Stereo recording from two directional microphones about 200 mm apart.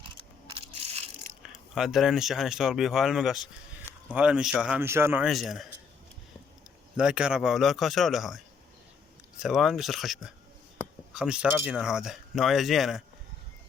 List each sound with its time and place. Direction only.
0.5 s a sound: 30° right (ahead or behind)
1.4 s speech: centre (ahead or behind)
6.9 s speech: 5° right (ahead or behind)
9.4 s speech: centre (ahead or behind)